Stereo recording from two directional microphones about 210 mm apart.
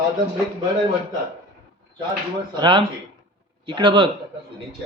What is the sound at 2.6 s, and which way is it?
Speech, 20° right (ahead or behind).